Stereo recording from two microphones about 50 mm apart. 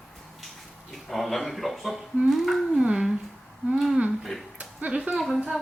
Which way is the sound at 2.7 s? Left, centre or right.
Centre.